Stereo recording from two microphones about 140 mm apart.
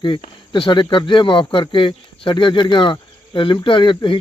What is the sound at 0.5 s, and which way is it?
Speech, 35° left (ahead or behind).